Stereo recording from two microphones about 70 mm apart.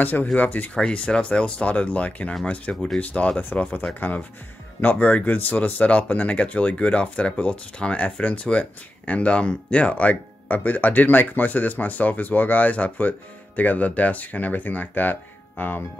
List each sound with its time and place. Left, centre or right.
0.0 s speech: left
0.7 s speech: centre
2.7 s speech: centre
3.0 s speech: left